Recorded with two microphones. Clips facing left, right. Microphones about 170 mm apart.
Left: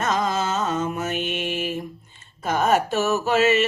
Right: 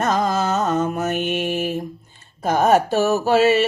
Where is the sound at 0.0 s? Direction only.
35° right (ahead or behind).